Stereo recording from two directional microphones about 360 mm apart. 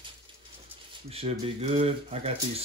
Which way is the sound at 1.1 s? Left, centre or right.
Centre.